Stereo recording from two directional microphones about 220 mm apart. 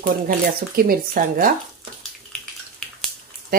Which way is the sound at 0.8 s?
40° right (ahead or behind).